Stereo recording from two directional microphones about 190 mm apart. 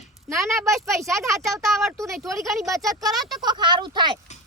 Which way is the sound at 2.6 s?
15° right (ahead or behind).